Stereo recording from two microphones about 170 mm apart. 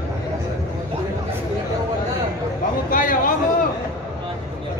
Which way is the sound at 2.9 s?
55° left (ahead or behind).